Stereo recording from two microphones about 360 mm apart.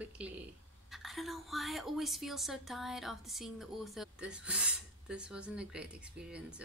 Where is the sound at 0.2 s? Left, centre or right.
Centre.